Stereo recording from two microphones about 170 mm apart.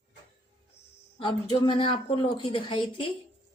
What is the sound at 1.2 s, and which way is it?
A woman's voice, 30° left (ahead or behind).